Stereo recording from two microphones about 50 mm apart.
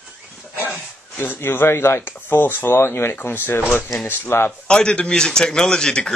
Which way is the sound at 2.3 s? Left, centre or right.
Left.